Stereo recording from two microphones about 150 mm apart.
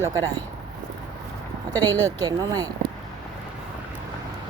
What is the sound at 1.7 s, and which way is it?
Speech, 25° right (ahead or behind).